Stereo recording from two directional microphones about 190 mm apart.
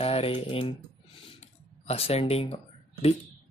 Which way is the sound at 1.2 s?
30° left (ahead or behind).